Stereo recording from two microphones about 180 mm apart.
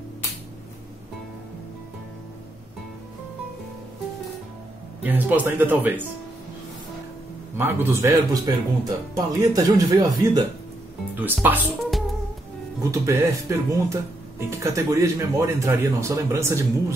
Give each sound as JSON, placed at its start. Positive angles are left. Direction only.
{"t": 5.0, "sound": "speech", "side_deg": -10}
{"t": 7.5, "sound": "speech", "side_deg": -15}
{"t": 11.1, "sound": "speech", "side_deg": -10}
{"t": 12.9, "sound": "speech", "side_deg": -15}